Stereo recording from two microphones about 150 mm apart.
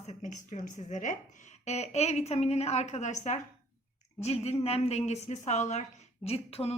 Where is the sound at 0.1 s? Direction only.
55° left (ahead or behind).